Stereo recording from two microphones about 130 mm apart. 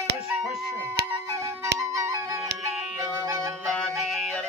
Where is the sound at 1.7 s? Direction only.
25° right (ahead or behind).